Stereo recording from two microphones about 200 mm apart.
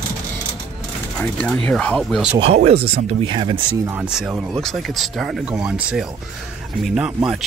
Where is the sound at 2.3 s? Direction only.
30° right (ahead or behind).